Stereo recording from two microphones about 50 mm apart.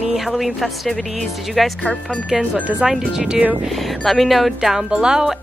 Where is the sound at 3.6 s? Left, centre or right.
Centre.